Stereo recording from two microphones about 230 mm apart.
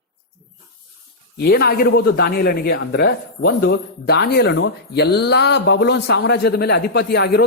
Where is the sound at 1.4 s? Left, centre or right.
Left.